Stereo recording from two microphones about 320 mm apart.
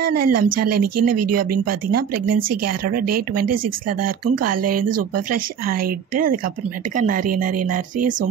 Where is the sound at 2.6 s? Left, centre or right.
Right.